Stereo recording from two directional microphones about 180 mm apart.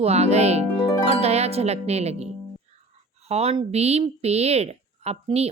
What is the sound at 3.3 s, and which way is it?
Speech, 35° right (ahead or behind).